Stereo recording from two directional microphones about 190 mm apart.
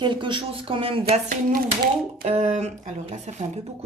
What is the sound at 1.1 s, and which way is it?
Speech, 50° right (ahead or behind).